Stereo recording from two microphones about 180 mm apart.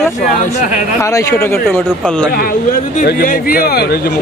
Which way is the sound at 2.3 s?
55° left (ahead or behind).